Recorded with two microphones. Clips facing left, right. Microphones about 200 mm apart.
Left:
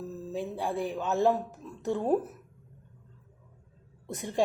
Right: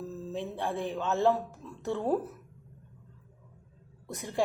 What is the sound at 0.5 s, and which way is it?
Speech, 15° left (ahead or behind).